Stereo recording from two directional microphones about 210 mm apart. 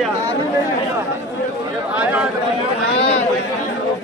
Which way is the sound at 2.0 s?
5° right (ahead or behind).